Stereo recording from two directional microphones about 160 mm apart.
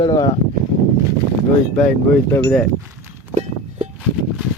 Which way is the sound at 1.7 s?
10° left (ahead or behind).